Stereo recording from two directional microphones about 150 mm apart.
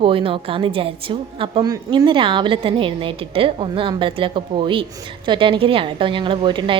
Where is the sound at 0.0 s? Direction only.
35° right (ahead or behind).